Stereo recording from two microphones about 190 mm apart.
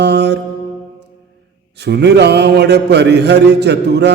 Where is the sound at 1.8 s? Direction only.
60° right (ahead or behind).